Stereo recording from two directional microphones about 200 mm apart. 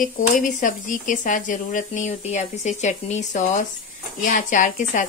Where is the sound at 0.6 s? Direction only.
40° left (ahead or behind).